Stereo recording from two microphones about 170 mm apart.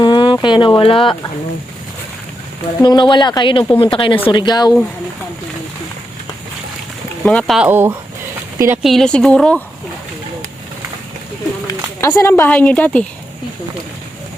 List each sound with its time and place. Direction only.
0.0 s a sound: 30° left (ahead or behind)
2.8 s speech: 25° left (ahead or behind)
7.3 s speech: 5° left (ahead or behind)
7.7 s speech: 10° right (ahead or behind)
8.8 s speech: centre (ahead or behind)
11.7 s speech: 15° left (ahead or behind)